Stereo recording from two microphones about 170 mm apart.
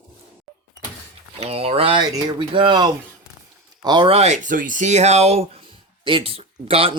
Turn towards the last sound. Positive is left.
turn(degrees=-35)  # may be behind; listen again after turning